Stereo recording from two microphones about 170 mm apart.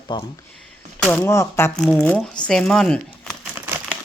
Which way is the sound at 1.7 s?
5° left (ahead or behind).